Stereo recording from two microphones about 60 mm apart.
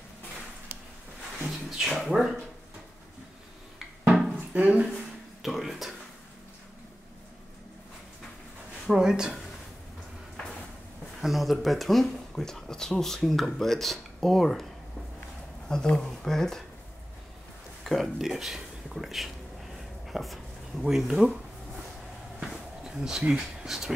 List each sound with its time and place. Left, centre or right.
1.8 s speech: centre
4.6 s speech: right
5.4 s a sound: centre
8.8 s speech: centre
11.1 s speech: centre
15.7 s speech: centre
17.8 s speech: centre
20.1 s a sound: centre
20.8 s speech: centre
22.4 s a sound: centre